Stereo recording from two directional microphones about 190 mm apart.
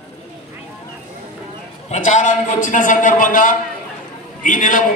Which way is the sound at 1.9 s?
40° left (ahead or behind).